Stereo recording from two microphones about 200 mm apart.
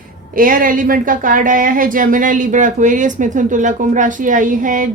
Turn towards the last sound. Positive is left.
turn(degrees=-40)  # may be behind; listen again after turning